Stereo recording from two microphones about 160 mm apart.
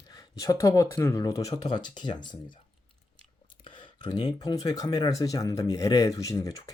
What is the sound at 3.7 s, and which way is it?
Clicking, 30° left (ahead or behind).